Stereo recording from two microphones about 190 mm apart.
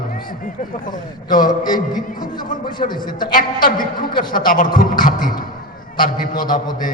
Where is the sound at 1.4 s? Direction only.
20° left (ahead or behind).